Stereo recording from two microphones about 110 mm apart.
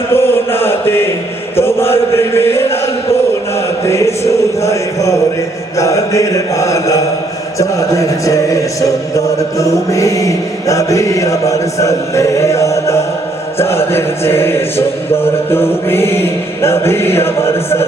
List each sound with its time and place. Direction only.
0.1 s chant: 20° left (ahead or behind)
3.8 s speech: 25° left (ahead or behind)